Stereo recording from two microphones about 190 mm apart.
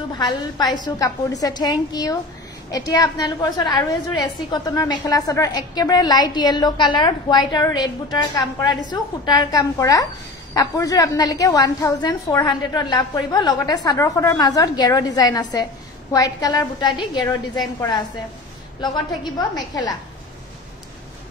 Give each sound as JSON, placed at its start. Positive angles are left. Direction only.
{"t": 0.2, "sound": "a woman's voice", "side_deg": 20}